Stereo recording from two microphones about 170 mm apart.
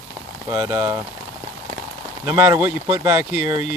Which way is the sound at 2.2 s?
15° right (ahead or behind).